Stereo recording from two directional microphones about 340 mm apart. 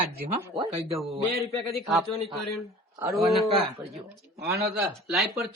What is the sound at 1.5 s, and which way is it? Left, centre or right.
A man's voice, centre.